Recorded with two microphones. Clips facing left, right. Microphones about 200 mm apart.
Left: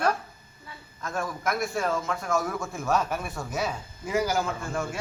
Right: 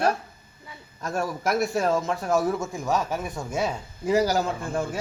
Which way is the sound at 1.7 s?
35° right (ahead or behind).